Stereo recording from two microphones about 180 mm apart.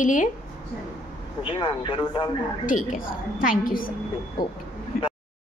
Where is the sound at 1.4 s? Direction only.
30° left (ahead or behind).